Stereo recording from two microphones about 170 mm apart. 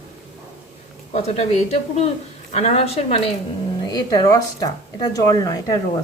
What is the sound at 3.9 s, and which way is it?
Speech, 25° left (ahead or behind).